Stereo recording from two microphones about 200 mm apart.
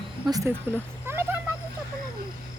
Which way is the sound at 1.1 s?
10° right (ahead or behind).